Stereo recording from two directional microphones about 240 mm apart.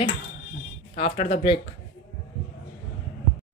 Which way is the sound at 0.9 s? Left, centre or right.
Left.